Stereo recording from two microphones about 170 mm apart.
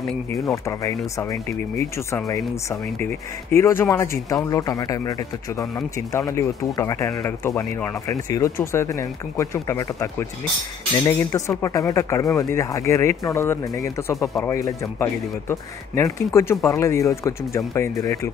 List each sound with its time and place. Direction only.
0.3 s speech: 20° left (ahead or behind)